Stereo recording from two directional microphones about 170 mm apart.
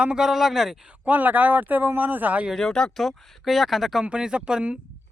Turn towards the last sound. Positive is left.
turn(degrees=-5)  # may be behind; listen again after turning